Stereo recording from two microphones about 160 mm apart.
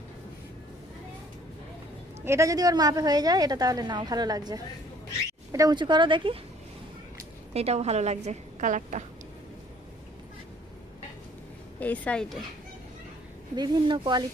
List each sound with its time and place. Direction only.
2.2 s a woman's voice: 20° right (ahead or behind)
7.5 s a woman's voice: 40° right (ahead or behind)
11.8 s speech: 10° left (ahead or behind)
13.6 s a woman's voice: 30° right (ahead or behind)